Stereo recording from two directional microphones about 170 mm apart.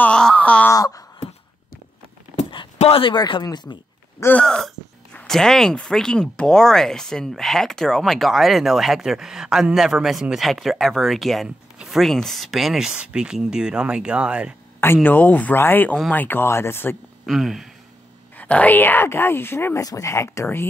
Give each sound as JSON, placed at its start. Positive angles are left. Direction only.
{"t": 0.0, "sound": "a sound", "side_deg": 5}
{"t": 0.7, "sound": "a sound", "side_deg": 20}
{"t": 2.8, "sound": "speech", "side_deg": 35}
{"t": 4.2, "sound": "speech", "side_deg": 10}
{"t": 15.0, "sound": "speech", "side_deg": 10}
{"t": 17.3, "sound": "speech", "side_deg": 0}